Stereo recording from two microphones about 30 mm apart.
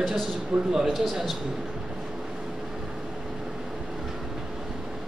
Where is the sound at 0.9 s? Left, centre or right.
Centre.